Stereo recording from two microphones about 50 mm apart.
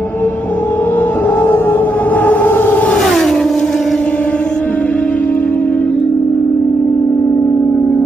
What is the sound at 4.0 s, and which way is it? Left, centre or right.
Music, left.